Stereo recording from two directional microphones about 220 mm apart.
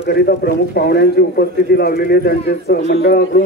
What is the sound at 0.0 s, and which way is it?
A man's voice, 45° left (ahead or behind).